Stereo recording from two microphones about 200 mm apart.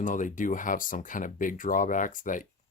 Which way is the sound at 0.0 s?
40° left (ahead or behind).